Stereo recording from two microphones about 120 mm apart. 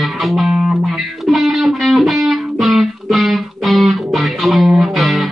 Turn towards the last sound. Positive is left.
turn(degrees=0)  # may be behind; listen again after turning